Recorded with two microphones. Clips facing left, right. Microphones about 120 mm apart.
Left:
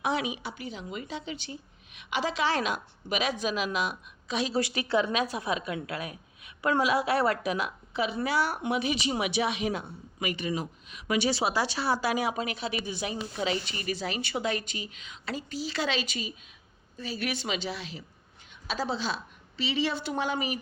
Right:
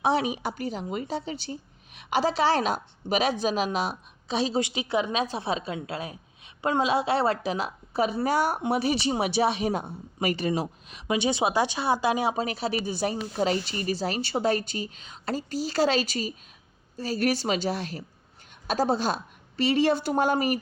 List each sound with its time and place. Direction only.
0.0 s a woman's voice: 35° right (ahead or behind)
11.1 s a woman's voice: 20° right (ahead or behind); by 20.6 s 45° right (ahead or behind)